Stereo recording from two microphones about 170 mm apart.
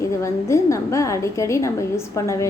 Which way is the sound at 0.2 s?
15° left (ahead or behind).